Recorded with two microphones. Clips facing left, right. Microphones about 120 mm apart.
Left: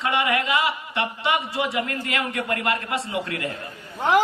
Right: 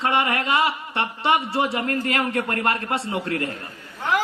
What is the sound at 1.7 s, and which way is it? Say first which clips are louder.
A woman's voice: right 3 dB; 40° right (ahead or behind).